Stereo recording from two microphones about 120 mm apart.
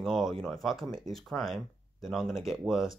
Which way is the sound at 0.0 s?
Centre (ahead or behind).